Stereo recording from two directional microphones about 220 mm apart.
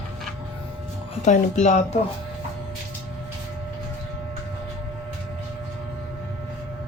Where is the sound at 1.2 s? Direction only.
30° left (ahead or behind).